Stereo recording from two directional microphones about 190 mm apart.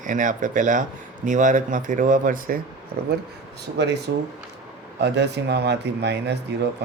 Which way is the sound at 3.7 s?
65° right (ahead or behind).